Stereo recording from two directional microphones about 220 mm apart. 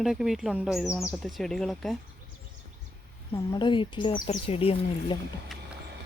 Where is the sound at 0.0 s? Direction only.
Centre (ahead or behind).